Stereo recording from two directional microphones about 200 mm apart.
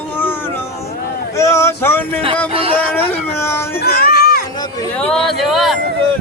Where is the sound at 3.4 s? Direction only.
10° left (ahead or behind).